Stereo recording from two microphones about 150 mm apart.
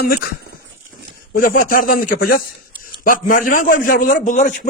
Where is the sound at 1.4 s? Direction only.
70° left (ahead or behind).